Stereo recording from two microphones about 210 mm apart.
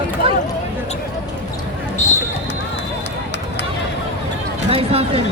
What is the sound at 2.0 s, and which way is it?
Basketball bounce, 35° left (ahead or behind).